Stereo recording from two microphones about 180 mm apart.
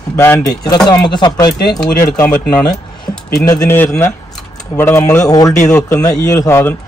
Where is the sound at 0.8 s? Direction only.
25° left (ahead or behind).